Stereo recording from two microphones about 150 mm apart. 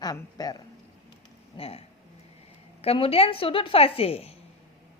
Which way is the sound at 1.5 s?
40° left (ahead or behind).